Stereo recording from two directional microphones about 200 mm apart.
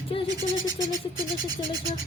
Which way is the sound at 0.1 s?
30° left (ahead or behind).